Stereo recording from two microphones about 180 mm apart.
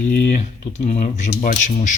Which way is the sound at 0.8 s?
40° left (ahead or behind).